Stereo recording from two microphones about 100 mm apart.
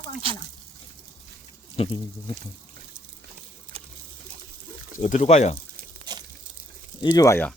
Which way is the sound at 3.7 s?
75° right (ahead or behind).